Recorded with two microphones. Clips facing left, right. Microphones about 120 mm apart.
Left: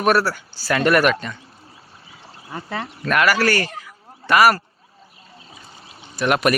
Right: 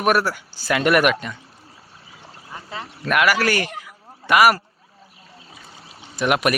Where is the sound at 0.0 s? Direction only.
10° right (ahead or behind).